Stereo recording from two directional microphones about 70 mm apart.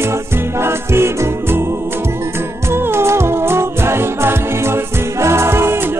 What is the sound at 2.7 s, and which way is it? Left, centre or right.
Music, right.